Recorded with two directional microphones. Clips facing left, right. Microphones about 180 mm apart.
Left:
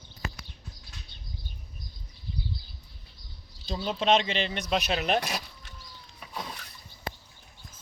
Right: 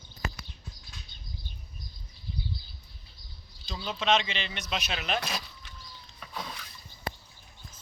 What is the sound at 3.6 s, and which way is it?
Speech, 35° left (ahead or behind).